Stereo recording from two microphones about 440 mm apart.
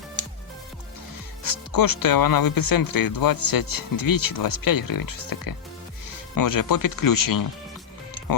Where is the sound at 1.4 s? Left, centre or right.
Left.